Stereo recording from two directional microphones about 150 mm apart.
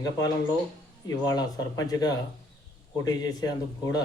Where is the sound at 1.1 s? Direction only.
25° left (ahead or behind).